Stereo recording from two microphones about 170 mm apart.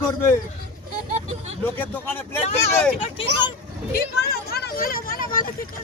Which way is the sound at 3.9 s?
65° left (ahead or behind).